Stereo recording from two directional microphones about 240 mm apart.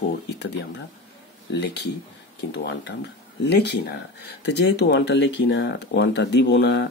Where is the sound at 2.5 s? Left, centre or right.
Left.